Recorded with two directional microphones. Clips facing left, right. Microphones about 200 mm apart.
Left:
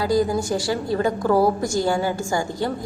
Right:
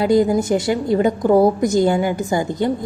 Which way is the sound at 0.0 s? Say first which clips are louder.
Right 5 dB; 20° right (ahead or behind).